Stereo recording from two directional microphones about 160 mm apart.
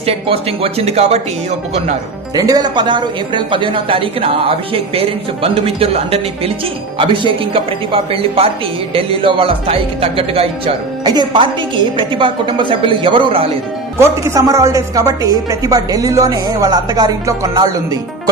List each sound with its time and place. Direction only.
0.0 s a woman's voice: 35° right (ahead or behind)
2.3 s a woman's voice: 25° right (ahead or behind)
11.0 s a woman's voice: 25° right (ahead or behind)
14.3 s a woman's voice: 20° right (ahead or behind)